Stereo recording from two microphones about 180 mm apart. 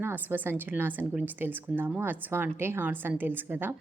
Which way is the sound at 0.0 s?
10° right (ahead or behind).